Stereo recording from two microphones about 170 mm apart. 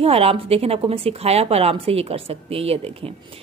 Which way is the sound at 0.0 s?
35° right (ahead or behind).